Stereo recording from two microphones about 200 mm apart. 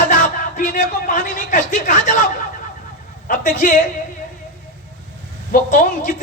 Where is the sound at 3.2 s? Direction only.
40° left (ahead or behind).